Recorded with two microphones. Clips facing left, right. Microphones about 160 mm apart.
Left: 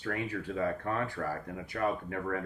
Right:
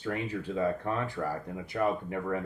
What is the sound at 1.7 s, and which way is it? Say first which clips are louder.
Speech: right 3 dB; 25° right (ahead or behind).